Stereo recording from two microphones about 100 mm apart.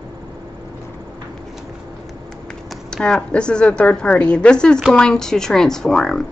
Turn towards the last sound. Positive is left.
turn(degrees=5)  # may be behind; listen again after turning